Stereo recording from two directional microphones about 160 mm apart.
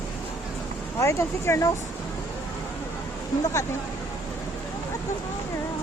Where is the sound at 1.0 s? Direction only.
20° left (ahead or behind).